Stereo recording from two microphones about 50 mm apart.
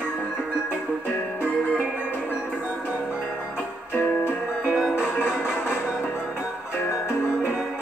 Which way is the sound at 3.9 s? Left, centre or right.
Left.